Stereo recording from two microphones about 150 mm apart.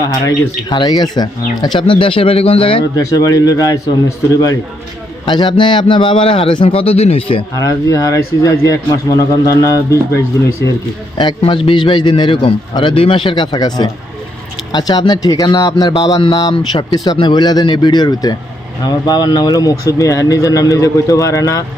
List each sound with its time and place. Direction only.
0.3 s a man's voice: 25° left (ahead or behind)
2.9 s a man's voice: 25° left (ahead or behind)
5.2 s a man's voice: 30° left (ahead or behind)
7.5 s a man's voice: 20° left (ahead or behind)
11.2 s a man's voice: 30° left (ahead or behind)